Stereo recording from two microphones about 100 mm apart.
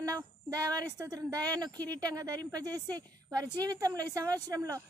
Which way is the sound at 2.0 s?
35° right (ahead or behind).